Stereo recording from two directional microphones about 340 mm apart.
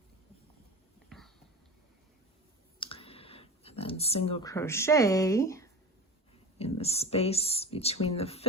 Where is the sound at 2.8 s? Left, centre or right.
Centre.